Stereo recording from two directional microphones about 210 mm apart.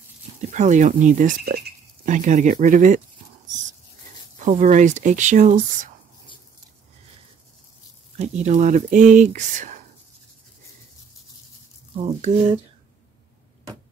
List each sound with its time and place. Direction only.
0.4 s speech: 35° right (ahead or behind)
4.4 s speech: 35° right (ahead or behind)
8.2 s speech: 35° right (ahead or behind)
12.0 s speech: 35° right (ahead or behind)